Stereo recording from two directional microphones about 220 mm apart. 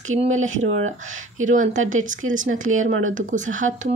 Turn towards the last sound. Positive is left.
turn(degrees=-35)  # may be behind; listen again after turning